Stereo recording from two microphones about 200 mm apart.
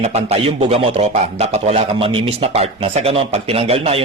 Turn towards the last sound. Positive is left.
turn(degrees=-30)  # may be behind; listen again after turning